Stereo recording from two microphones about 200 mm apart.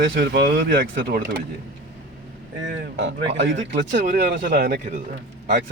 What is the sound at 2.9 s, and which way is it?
Speech, 60° right (ahead or behind).